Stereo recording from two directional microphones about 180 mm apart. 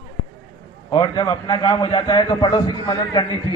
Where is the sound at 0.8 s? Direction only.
25° left (ahead or behind).